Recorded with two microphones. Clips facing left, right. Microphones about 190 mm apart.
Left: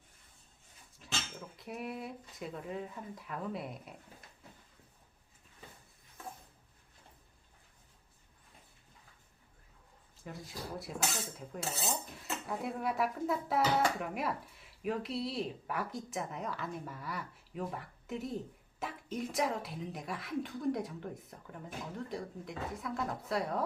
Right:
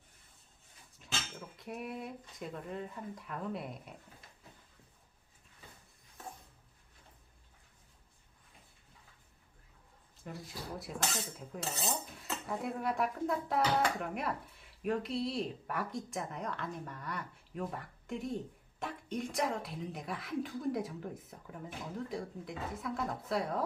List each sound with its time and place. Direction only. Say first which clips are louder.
1.0 s speech: left 1 dB; centre (ahead or behind)
10.3 s dishes: even; centre (ahead or behind)